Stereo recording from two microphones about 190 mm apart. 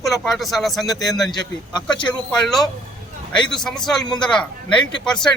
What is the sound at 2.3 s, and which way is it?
A man's voice, centre (ahead or behind).